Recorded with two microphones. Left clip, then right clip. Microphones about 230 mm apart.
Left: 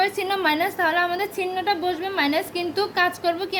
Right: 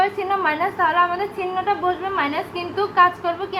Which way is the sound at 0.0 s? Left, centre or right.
Left.